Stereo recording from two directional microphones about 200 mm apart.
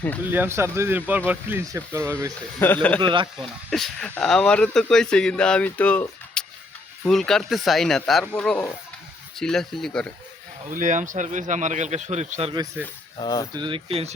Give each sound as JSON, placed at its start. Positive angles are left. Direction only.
{"t": 0.3, "sound": "speech", "side_deg": -10}
{"t": 2.6, "sound": "speech", "side_deg": 10}
{"t": 3.0, "sound": "speech", "side_deg": -25}
{"t": 3.7, "sound": "speech", "side_deg": 5}
{"t": 10.7, "sound": "speech", "side_deg": -40}
{"t": 13.1, "sound": "speech", "side_deg": 20}
{"t": 13.5, "sound": "speech", "side_deg": -25}